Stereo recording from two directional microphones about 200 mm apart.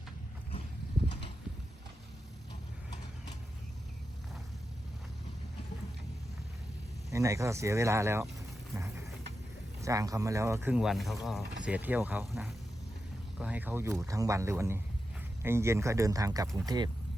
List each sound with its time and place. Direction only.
7.1 s speech: 15° right (ahead or behind)
8.7 s a sound: 15° right (ahead or behind)
9.8 s speech: 15° right (ahead or behind)